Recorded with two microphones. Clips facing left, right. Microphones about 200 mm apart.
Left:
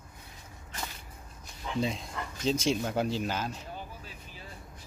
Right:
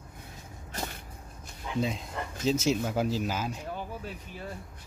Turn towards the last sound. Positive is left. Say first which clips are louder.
# right 8 dB
turn(degrees=-60)  # may be behind; listen again after turning